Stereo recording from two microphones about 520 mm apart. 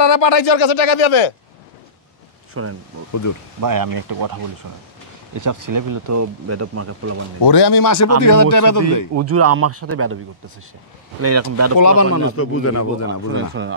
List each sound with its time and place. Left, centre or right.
0.0 s speech: left
2.6 s speech: right
3.6 s speech: right
5.4 s speech: right
7.4 s a man's voice: left
9.1 s speech: right
11.1 s speech: right
11.8 s speech: left
13.3 s speech: right